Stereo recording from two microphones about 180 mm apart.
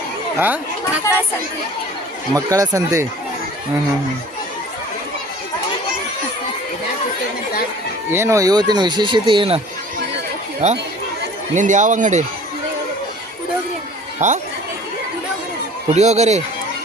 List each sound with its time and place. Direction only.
0.3 s speech: 10° right (ahead or behind)
2.3 s speech: 20° right (ahead or behind)
8.1 s speech: 15° right (ahead or behind)
10.6 s speech: 40° right (ahead or behind)
14.2 s speech: 40° right (ahead or behind)
15.9 s speech: 40° right (ahead or behind)